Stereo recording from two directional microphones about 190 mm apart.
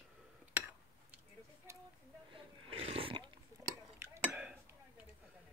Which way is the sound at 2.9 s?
30° right (ahead or behind).